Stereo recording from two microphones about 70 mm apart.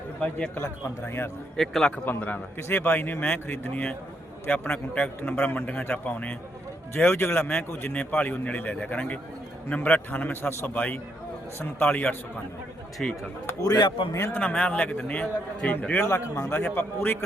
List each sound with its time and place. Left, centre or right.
0.2 s a man's voice: centre
0.5 s speech: left
1.5 s a man's voice: centre
2.0 s a man's voice: left
6.9 s speech: left
7.9 s a man's voice: centre
13.0 s a man's voice: centre
13.6 s speech: left
14.3 s a man's voice: centre
16.0 s speech: left
16.6 s a man's voice: left